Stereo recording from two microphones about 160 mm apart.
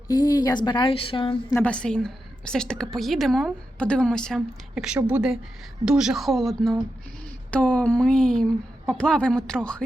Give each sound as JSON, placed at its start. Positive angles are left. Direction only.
{"t": 0.1, "sound": "speech", "side_deg": 25}
{"t": 1.5, "sound": "a woman's voice", "side_deg": 10}